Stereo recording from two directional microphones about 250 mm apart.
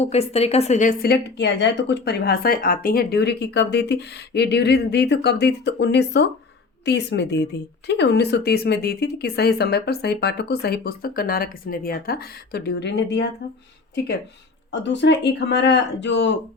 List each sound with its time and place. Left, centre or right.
0.0 s a woman's voice: left
14.7 s speech: left